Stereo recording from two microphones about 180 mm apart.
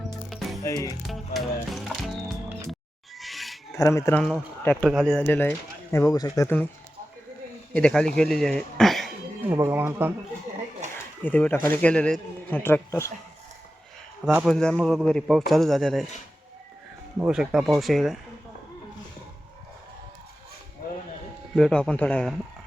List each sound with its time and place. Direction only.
0.3 s music: centre (ahead or behind)
0.6 s speech: 20° left (ahead or behind)
1.0 s music: centre (ahead or behind)
3.2 s a sound: centre (ahead or behind)
3.8 s speech: 15° left (ahead or behind)
7.7 s speech: 5° left (ahead or behind)
9.6 s speech: 15° right (ahead or behind)
11.2 s speech: 10° left (ahead or behind)
14.3 s speech: 5° right (ahead or behind)
17.2 s speech: 5° right (ahead or behind)
21.5 s speech: 5° left (ahead or behind)